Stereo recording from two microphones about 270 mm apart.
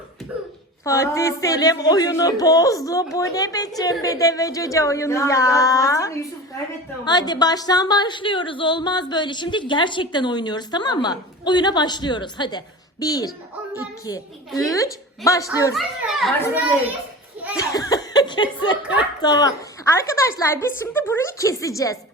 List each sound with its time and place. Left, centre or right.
0.9 s a woman's voice: centre
15.7 s a child's voice: centre
17.6 s laughter: centre
19.2 s a woman's voice: centre